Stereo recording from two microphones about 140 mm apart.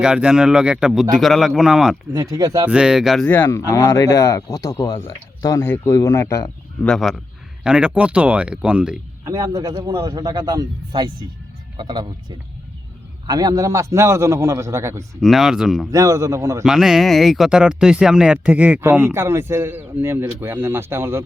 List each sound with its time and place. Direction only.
0.0 s speech: 5° right (ahead or behind)
2.1 s a man's voice: 25° right (ahead or behind)
2.6 s speech: 5° right (ahead or behind)
3.2 s speech: 15° left (ahead or behind)
6.8 s speech: centre (ahead or behind)
9.2 s a man's voice: 25° right (ahead or behind)
13.2 s a man's voice: 30° right (ahead or behind)
15.2 s speech: centre (ahead or behind)
15.9 s a man's voice: 25° right (ahead or behind)
16.6 s speech: 5° right (ahead or behind)